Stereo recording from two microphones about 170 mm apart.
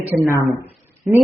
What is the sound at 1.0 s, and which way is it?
Speech, centre (ahead or behind).